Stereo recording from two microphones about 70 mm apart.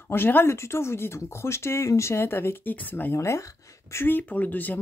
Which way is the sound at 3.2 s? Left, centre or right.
Left.